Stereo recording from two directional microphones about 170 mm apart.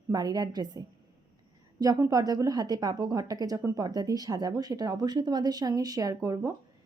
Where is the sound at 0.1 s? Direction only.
20° right (ahead or behind).